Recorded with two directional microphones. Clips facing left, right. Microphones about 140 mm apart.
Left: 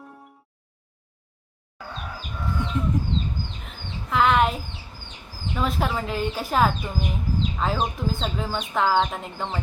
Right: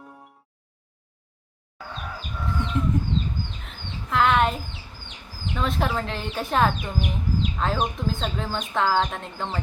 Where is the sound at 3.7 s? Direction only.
Centre (ahead or behind).